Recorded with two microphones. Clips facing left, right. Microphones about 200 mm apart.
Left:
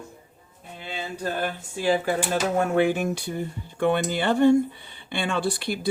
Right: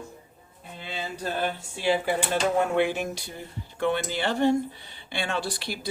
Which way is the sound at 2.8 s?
50° left (ahead or behind).